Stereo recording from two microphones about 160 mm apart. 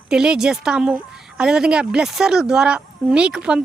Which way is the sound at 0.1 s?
5° right (ahead or behind).